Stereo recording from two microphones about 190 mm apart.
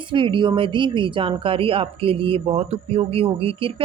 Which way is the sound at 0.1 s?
25° right (ahead or behind).